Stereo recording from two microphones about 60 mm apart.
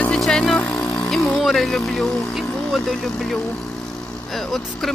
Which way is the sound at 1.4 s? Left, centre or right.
Centre.